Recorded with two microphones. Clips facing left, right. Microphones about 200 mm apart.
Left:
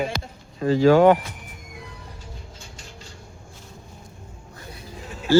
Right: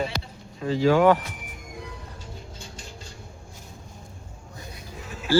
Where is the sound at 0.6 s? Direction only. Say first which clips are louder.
Left 5 dB; 45° left (ahead or behind).